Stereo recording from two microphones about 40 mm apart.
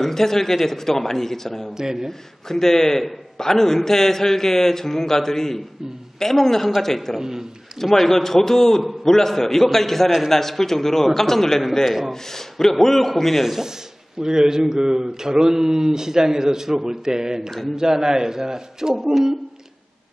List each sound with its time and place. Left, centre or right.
0.0 s speech: centre
1.8 s speech: centre
2.0 s speech: centre
7.2 s speech: centre
7.8 s a man's voice: centre
14.2 s speech: centre